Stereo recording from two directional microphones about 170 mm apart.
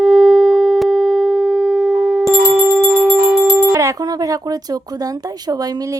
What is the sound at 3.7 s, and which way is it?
Speech, 20° right (ahead or behind).